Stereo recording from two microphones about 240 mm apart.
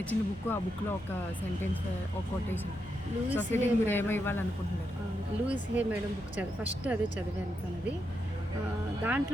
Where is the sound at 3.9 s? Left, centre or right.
Centre.